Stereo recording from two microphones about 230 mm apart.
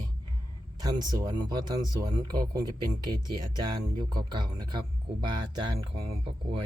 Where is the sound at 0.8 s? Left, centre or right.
Centre.